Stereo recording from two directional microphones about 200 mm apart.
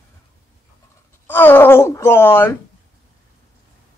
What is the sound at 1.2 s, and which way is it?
Speech, 10° left (ahead or behind).